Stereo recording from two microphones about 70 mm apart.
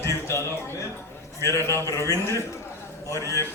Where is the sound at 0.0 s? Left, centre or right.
Left.